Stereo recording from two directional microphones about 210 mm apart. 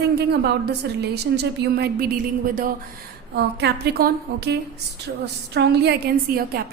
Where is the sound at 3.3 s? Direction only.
50° right (ahead or behind).